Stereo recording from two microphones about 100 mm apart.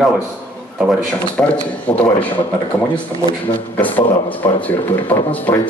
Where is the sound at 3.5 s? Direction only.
20° left (ahead or behind).